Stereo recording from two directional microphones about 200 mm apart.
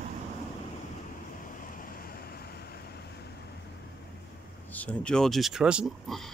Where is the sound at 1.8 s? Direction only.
45° left (ahead or behind).